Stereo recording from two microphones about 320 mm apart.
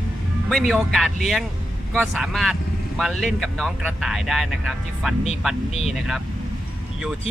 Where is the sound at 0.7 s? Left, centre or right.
Centre.